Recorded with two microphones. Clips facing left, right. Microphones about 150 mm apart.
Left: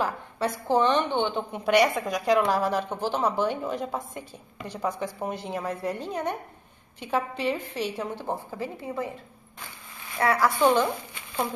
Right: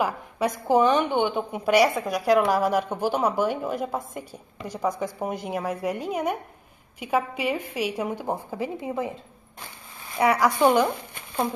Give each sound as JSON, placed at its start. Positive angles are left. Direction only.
{"t": 0.0, "sound": "a woman's voice", "side_deg": -15}